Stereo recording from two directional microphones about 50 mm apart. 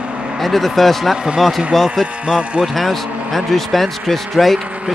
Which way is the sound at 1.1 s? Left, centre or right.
Centre.